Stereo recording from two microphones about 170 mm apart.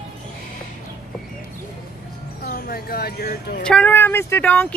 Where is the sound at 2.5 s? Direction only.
60° left (ahead or behind).